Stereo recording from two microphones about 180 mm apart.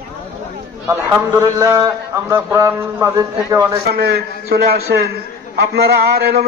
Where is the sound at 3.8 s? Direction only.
60° right (ahead or behind).